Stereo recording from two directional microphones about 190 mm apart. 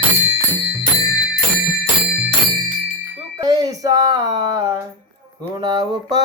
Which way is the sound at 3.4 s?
20° right (ahead or behind).